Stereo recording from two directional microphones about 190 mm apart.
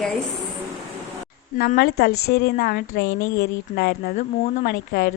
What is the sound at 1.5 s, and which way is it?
A woman's voice, 50° left (ahead or behind).